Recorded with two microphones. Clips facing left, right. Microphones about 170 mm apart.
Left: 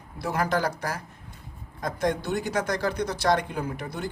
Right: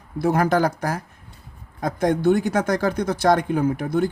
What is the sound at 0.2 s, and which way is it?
Speech, 50° right (ahead or behind).